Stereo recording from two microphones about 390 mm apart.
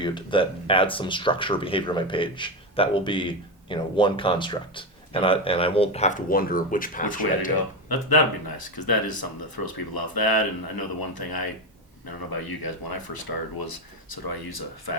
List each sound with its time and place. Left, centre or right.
0.0 s speech: centre
7.5 s speech: left
12.5 s speech: left